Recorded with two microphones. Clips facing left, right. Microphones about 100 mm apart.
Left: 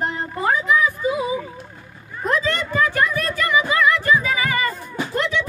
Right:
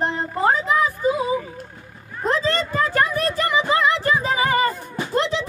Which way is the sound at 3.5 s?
30° right (ahead or behind).